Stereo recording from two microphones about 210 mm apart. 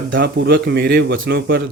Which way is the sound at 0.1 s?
55° right (ahead or behind).